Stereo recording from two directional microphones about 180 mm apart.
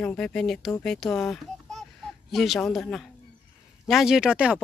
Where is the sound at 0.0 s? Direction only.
5° left (ahead or behind).